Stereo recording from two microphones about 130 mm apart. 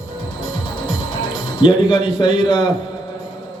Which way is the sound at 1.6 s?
40° left (ahead or behind).